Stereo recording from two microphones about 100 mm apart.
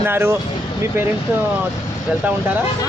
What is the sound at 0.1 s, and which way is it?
Speech, 25° right (ahead or behind).